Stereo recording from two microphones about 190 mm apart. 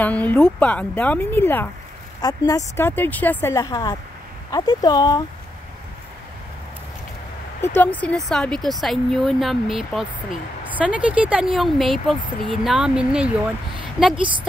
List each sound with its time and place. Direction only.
0.0 s speech: 10° left (ahead or behind)
7.6 s speech: 10° left (ahead or behind)
14.1 s a woman's voice: 25° right (ahead or behind)